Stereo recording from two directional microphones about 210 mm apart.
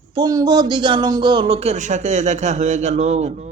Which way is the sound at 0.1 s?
20° right (ahead or behind).